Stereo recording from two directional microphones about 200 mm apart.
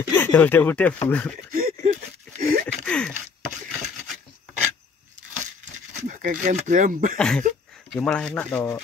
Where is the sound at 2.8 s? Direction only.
5° left (ahead or behind).